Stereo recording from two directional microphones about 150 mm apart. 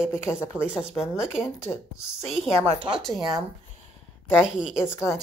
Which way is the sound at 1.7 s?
15° left (ahead or behind).